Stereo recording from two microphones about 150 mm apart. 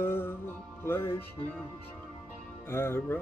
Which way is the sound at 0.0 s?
15° left (ahead or behind).